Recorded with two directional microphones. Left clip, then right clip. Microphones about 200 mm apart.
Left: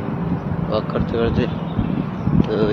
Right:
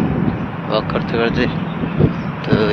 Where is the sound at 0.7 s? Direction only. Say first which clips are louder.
Right 3 dB; centre (ahead or behind).